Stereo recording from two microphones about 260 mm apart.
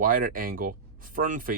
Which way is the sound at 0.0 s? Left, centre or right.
Right.